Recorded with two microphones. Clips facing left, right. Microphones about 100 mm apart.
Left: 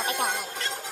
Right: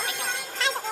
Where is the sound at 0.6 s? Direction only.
90° right.